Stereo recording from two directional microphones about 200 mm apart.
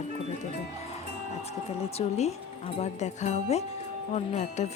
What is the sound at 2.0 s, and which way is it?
Speech, 30° left (ahead or behind).